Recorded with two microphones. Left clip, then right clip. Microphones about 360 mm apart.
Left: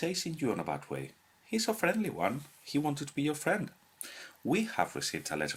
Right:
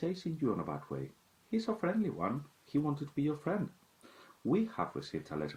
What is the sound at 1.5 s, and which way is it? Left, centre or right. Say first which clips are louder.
Speech: left 5 dB; left.